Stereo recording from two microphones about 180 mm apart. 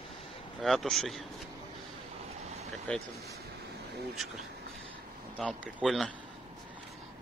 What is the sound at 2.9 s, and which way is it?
Speech, 5° left (ahead or behind).